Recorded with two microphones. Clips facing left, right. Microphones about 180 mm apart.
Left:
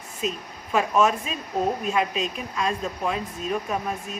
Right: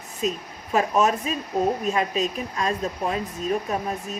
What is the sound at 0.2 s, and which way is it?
Speech, 40° right (ahead or behind).